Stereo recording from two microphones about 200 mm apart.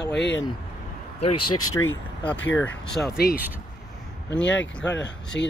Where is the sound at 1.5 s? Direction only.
90° left.